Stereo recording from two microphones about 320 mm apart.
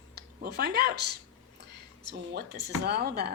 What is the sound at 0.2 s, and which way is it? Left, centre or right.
Speech, right.